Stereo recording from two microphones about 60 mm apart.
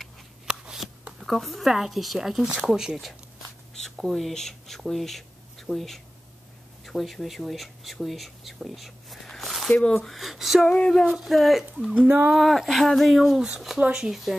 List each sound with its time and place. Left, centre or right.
0.5 s shuffling cards: centre
1.2 s speech: centre
3.7 s speech: centre
9.7 s speech: centre
10.9 s a sound: centre
11.1 s speech: centre
13.7 s speech: right
14.0 s speech: centre